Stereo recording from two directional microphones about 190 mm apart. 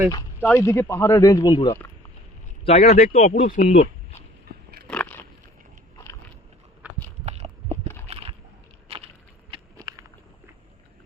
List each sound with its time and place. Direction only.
0.1 s speech: 15° left (ahead or behind)
2.6 s speech: 35° left (ahead or behind)
4.9 s biting: 5° left (ahead or behind)
6.8 s a sound: 10° right (ahead or behind)
7.3 s clip-clop: 35° right (ahead or behind)
8.0 s a sound: 30° right (ahead or behind)
9.5 s walk: 20° right (ahead or behind)